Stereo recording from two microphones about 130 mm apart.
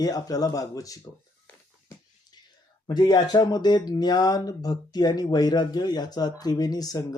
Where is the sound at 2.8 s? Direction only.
30° left (ahead or behind).